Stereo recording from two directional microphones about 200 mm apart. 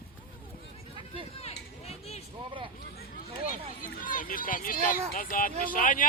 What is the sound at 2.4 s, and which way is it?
Speech, 25° right (ahead or behind).